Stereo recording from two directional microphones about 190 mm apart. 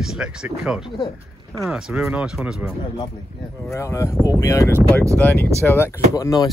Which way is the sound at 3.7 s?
15° left (ahead or behind).